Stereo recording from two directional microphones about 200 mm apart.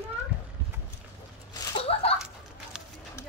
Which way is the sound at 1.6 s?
25° left (ahead or behind).